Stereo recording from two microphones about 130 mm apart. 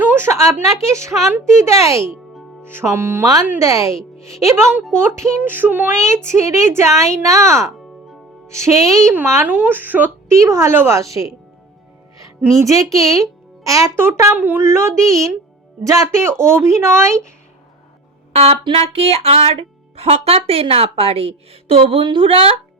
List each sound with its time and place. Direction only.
0.0 s a woman's voice: 15° right (ahead or behind)
4.9 s speech: 20° right (ahead or behind)
12.6 s speech: 25° right (ahead or behind)
18.3 s speech: 45° right (ahead or behind)